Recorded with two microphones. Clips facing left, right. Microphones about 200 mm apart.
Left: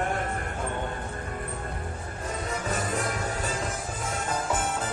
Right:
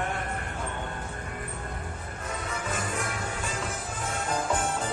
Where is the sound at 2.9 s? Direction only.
40° left (ahead or behind).